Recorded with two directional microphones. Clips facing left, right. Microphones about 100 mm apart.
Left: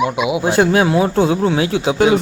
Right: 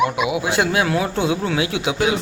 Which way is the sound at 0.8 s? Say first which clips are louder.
Left 6 dB; 25° left (ahead or behind).